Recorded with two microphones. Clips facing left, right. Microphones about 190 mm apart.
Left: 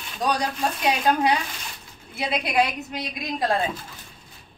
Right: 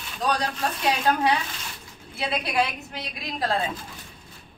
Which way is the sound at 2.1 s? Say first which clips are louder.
Left 2 dB; 15° left (ahead or behind).